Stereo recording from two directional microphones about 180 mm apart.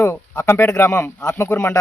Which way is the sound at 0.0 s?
15° left (ahead or behind).